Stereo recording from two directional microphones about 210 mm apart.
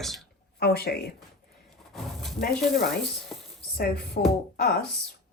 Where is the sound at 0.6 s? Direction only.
50° left (ahead or behind).